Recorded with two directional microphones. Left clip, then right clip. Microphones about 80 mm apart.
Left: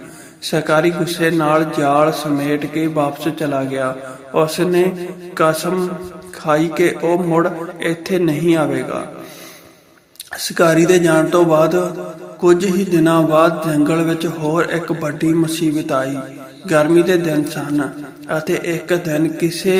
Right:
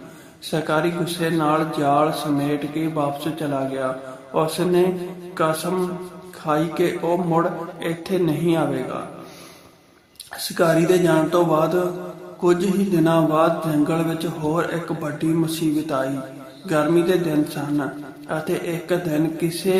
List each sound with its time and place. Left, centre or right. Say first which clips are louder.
0.4 s mantra: left 7 dB; left
10.3 s mantra: left 5 dB; left